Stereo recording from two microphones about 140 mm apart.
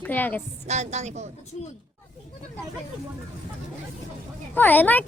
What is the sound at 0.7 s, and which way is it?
Speech, 55° right (ahead or behind).